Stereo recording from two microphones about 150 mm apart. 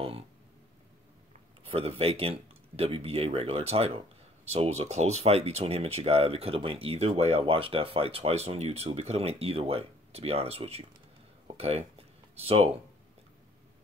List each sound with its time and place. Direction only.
1.6 s speech: 40° right (ahead or behind)